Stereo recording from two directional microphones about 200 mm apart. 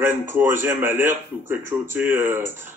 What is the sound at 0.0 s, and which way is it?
Speech, 10° right (ahead or behind).